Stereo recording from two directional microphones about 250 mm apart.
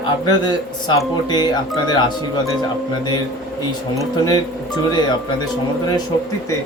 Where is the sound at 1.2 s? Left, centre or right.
Centre.